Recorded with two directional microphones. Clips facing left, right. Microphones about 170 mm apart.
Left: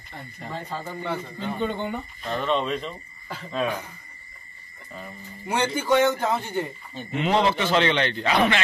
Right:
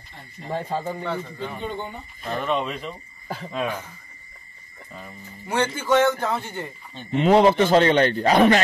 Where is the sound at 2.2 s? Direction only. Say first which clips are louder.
Even; 5° right (ahead or behind).